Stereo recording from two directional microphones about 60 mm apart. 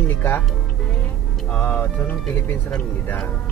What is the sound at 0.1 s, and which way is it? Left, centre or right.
Speech, left.